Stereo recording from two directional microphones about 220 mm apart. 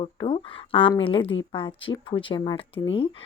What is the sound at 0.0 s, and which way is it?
Speech, 25° left (ahead or behind).